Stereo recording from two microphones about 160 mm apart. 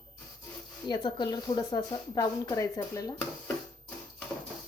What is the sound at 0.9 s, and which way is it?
Speech, 30° left (ahead or behind).